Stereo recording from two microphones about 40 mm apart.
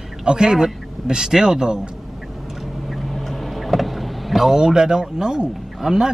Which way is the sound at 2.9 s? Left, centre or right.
Centre.